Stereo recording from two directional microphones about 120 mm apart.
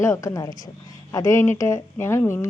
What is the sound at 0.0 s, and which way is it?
A woman's voice, 25° left (ahead or behind).